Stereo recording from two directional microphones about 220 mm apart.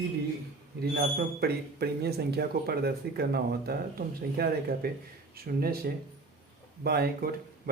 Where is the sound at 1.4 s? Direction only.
45° right (ahead or behind).